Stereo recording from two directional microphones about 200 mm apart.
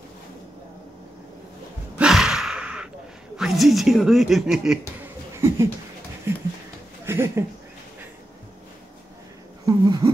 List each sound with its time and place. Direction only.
2.0 s sigh: 5° right (ahead or behind)
3.3 s speech: centre (ahead or behind)
5.3 s a sound: 15° right (ahead or behind)
7.1 s speech: 15° right (ahead or behind)
9.7 s speech: 20° right (ahead or behind)